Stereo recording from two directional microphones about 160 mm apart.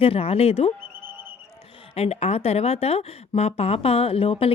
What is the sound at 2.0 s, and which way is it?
Speech, 40° left (ahead or behind).